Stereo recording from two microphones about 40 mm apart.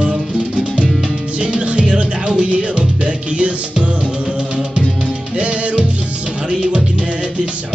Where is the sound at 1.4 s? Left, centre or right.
Right.